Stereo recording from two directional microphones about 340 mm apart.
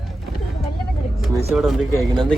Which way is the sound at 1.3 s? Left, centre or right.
Centre.